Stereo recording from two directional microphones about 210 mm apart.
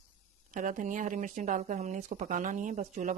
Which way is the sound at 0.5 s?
40° right (ahead or behind).